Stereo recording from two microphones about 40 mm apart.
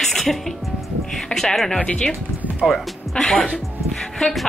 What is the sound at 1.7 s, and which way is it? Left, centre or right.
Speech, left.